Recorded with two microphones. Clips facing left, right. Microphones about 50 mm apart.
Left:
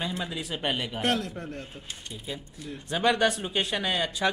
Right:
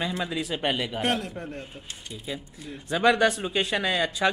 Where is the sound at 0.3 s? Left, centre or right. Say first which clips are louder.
Right 4 dB; right.